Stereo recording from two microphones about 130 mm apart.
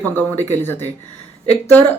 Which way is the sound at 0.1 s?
15° left (ahead or behind).